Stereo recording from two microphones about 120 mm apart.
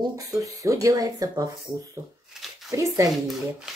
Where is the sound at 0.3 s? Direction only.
25° right (ahead or behind).